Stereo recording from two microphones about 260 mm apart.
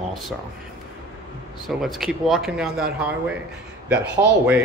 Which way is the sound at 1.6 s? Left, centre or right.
Centre.